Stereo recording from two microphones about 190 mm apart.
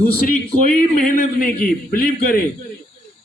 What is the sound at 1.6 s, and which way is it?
Speech, 45° left (ahead or behind).